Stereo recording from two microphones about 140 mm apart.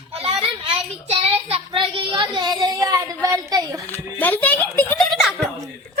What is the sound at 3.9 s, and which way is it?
Speech, 10° left (ahead or behind).